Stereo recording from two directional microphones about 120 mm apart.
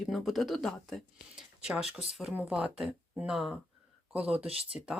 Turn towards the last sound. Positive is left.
turn(degrees=-55)  # may be behind; listen again after turning